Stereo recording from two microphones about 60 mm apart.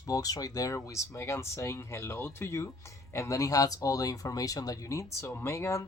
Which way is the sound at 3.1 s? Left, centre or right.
Left.